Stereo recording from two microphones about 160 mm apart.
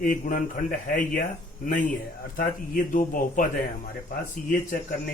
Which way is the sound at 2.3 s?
60° left (ahead or behind).